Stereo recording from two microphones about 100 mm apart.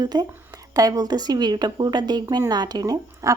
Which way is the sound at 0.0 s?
45° right (ahead or behind).